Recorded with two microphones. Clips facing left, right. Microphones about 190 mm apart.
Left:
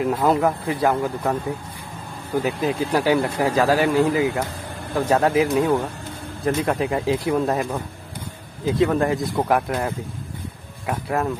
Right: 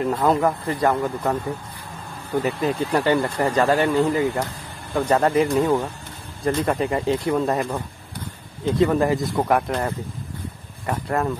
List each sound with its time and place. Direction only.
0.0 s speech: 5° left (ahead or behind)